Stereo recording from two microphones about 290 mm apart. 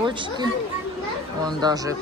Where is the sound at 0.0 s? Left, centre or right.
Centre.